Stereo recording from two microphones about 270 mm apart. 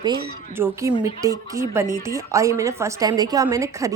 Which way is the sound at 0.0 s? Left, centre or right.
Centre.